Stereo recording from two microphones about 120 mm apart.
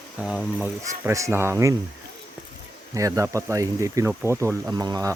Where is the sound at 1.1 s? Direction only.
25° right (ahead or behind).